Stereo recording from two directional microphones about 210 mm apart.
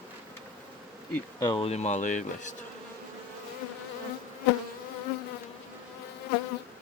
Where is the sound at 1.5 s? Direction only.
25° left (ahead or behind).